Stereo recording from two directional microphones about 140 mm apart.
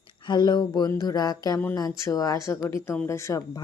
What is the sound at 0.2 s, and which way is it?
Speech, 30° left (ahead or behind).